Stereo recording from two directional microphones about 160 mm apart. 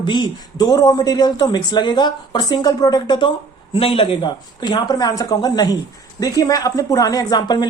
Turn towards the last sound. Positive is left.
turn(degrees=25)  # may be behind; listen again after turning